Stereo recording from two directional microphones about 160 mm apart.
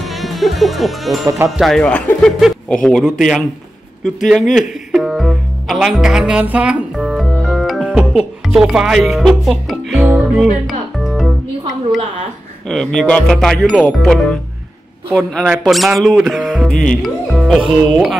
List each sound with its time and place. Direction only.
0.0 s music: centre (ahead or behind)
1.6 s speech: 5° left (ahead or behind)
4.6 s music: centre (ahead or behind)
12.6 s speech: 5° left (ahead or behind)